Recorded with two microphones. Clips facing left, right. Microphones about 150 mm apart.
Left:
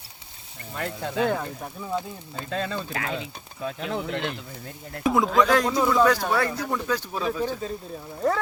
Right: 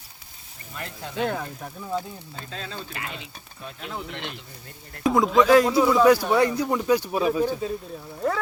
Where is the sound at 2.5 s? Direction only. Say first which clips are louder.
Left 8 dB; 55° left (ahead or behind); by 4.1 s 90° left.